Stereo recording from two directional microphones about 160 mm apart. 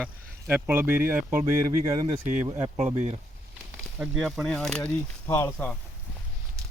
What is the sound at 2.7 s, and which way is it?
Speech, 45° right (ahead or behind).